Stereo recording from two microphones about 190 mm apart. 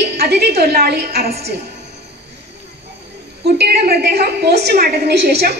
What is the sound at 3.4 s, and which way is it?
A woman's voice, 55° right (ahead or behind).